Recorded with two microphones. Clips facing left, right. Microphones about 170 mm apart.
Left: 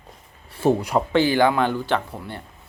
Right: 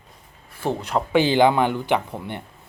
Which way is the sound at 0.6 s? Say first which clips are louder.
Left 6 dB; 25° left (ahead or behind).